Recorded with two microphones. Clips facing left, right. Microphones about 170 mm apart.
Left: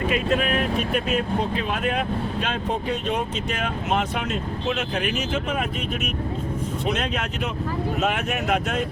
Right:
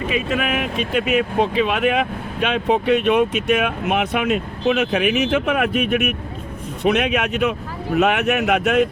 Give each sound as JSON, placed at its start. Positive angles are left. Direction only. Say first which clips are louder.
{"t": 0.3, "sound": "speech", "louder": "even", "side_deg": -85}